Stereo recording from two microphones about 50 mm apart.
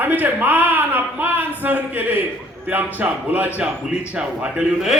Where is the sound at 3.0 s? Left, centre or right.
Right.